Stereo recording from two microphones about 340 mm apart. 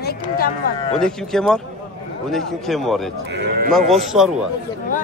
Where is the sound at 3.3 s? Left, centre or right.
Right.